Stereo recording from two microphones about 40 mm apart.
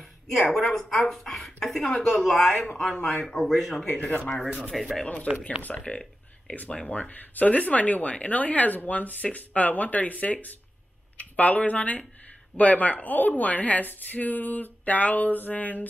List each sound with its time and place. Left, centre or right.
0.0 s a woman's voice: centre
1.9 s speech: left
2.2 s speech: centre
4.0 s speech: left
5.8 s a sound: left
6.9 s speech: left